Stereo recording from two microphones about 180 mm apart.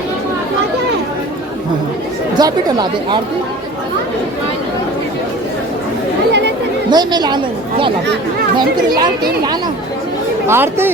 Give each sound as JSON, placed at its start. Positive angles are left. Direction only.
{"t": 2.4, "sound": "a woman's voice", "side_deg": -20}
{"t": 6.9, "sound": "a woman's voice", "side_deg": -25}
{"t": 10.4, "sound": "speech", "side_deg": -15}